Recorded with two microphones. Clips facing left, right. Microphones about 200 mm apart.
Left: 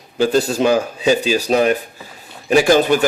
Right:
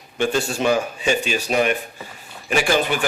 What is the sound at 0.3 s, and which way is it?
Speech, 40° left (ahead or behind).